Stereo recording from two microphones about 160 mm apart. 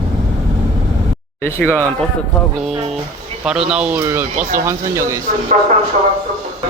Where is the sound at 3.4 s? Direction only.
5° right (ahead or behind).